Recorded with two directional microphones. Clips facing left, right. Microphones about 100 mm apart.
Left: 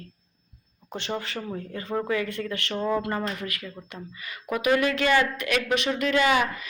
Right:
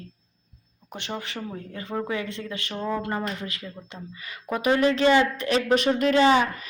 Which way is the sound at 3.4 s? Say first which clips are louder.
Left 1 dB; 25° right (ahead or behind).